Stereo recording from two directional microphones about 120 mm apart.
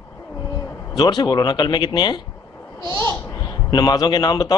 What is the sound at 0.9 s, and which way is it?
Speech, 40° left (ahead or behind).